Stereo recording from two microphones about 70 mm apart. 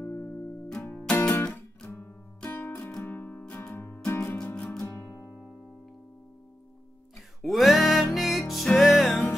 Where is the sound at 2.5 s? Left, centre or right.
Left.